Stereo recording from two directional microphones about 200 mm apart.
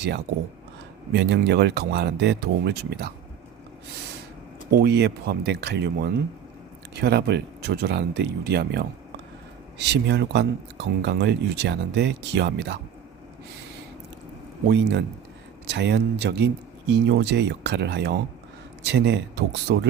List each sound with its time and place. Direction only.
1.1 s speech: 60° right (ahead or behind)
4.8 s speech: 55° right (ahead or behind)
14.7 s speech: 60° right (ahead or behind)